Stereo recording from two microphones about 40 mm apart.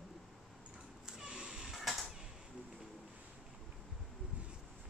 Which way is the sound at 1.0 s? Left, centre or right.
Centre.